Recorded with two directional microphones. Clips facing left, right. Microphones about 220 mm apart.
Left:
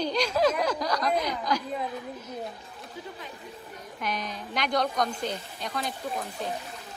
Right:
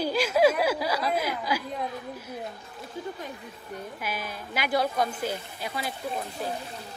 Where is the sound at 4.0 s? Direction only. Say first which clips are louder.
Left 5 dB; 5° right (ahead or behind).